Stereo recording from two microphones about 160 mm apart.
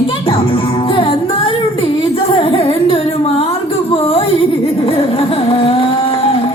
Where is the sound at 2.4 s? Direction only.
35° left (ahead or behind).